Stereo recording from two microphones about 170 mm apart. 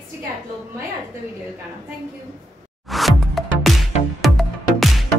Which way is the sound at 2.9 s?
Centre (ahead or behind).